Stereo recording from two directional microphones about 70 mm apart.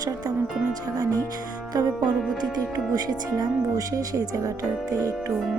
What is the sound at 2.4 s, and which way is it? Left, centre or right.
Speech, right.